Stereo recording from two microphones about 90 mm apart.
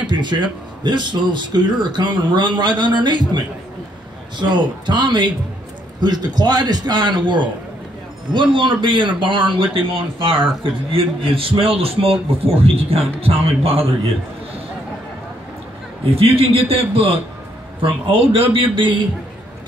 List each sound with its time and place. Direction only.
0.0 s a man's voice: 60° right (ahead or behind); by 13.8 s 90° right
16.2 s a man's voice: 90° right
17.8 s a man's voice: 75° right (ahead or behind)